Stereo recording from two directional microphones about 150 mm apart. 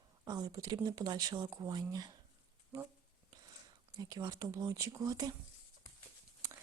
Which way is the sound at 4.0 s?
25° right (ahead or behind).